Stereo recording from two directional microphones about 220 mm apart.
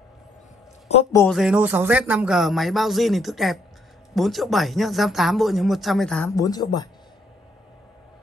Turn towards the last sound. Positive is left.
turn(degrees=20)  # may be behind; listen again after turning